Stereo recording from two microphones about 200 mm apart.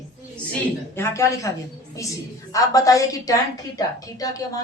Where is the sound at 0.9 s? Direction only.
15° left (ahead or behind).